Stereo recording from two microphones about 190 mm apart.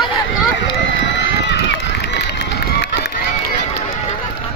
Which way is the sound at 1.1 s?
65° left (ahead or behind).